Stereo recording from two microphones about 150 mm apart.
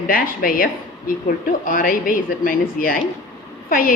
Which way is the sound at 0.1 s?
75° left (ahead or behind).